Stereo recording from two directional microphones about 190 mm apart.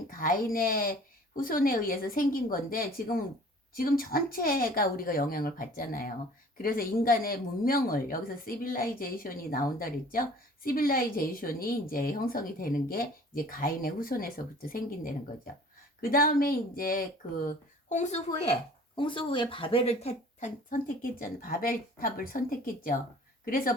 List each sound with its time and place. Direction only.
0.1 s speech: 50° left (ahead or behind)
18.9 s speech: 25° left (ahead or behind); by 23.7 s 50° left (ahead or behind)